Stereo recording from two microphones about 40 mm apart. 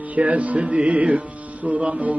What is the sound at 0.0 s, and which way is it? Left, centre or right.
Music, right.